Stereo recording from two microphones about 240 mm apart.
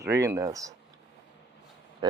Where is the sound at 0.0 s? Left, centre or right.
Centre.